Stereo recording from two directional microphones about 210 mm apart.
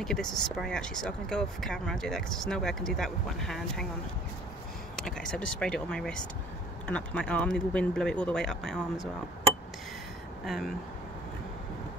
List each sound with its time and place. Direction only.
0.0 s speech: centre (ahead or behind)
5.0 s speech: 5° left (ahead or behind)
10.4 s speech: centre (ahead or behind)